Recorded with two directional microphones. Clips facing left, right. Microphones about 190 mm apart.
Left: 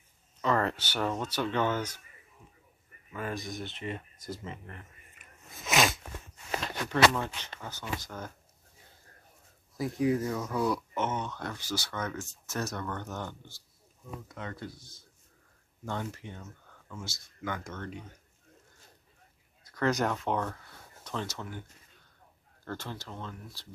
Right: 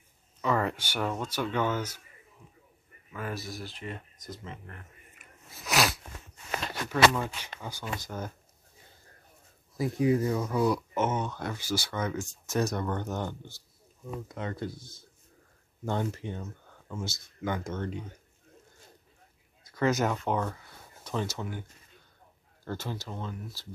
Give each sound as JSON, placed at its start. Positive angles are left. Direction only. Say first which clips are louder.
{"t": 0.4, "sound": "speech", "louder": "even", "side_deg": -10}
{"t": 3.1, "sound": "speech", "louder": "left 1 dB", "side_deg": -5}
{"t": 5.2, "sound": "a sound", "louder": "left 1 dB", "side_deg": 0}
{"t": 6.9, "sound": "speech", "louder": "right 1 dB", "side_deg": -10}
{"t": 9.8, "sound": "speech", "louder": "right 2 dB", "side_deg": -5}
{"t": 19.7, "sound": "speech", "louder": "right 2 dB", "side_deg": -5}
{"t": 22.7, "sound": "speech", "louder": "right 3 dB", "side_deg": -10}